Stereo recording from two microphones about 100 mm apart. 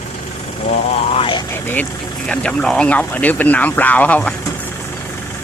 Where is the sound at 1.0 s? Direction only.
65° left (ahead or behind).